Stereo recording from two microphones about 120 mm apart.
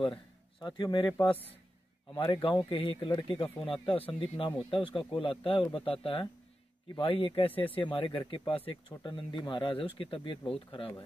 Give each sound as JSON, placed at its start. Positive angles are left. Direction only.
{"t": 0.0, "sound": "speech", "side_deg": 40}
{"t": 1.0, "sound": "a man's voice", "side_deg": 20}
{"t": 2.1, "sound": "speech", "side_deg": 45}
{"t": 3.8, "sound": "speech", "side_deg": 50}
{"t": 8.9, "sound": "speech", "side_deg": 40}